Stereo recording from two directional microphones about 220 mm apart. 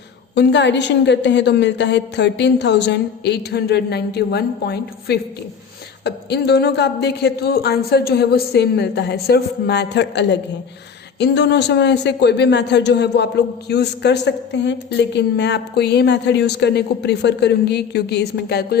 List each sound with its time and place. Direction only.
0.3 s a man's voice: 50° left (ahead or behind)